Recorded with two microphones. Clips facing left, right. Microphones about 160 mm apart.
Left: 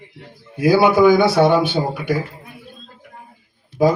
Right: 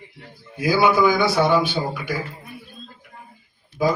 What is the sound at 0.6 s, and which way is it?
Speech, 60° left (ahead or behind).